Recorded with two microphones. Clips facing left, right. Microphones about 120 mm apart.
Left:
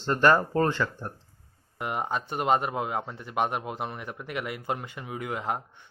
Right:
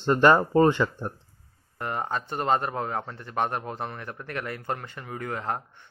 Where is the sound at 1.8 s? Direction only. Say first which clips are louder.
Even; 15° left (ahead or behind).